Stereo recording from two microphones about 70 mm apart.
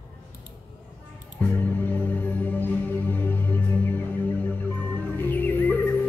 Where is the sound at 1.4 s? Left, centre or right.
Left.